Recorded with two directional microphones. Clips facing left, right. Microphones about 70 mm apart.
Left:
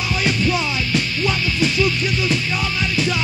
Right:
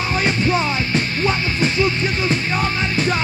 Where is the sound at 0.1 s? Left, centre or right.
Right.